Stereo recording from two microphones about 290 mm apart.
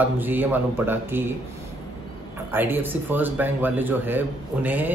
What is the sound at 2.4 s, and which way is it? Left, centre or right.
Speech, centre.